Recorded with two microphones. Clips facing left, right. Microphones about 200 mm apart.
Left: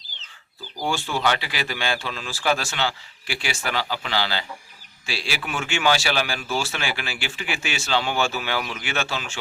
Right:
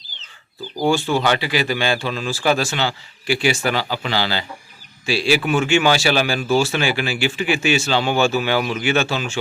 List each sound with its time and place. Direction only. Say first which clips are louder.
0.8 s speech: right 8 dB; 25° right (ahead or behind)
1.4 s a man's voice: right 9 dB; 5° right (ahead or behind)